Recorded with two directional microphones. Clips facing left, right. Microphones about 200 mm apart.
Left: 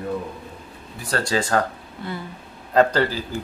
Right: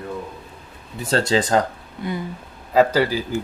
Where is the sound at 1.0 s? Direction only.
25° right (ahead or behind); by 3.2 s 10° right (ahead or behind).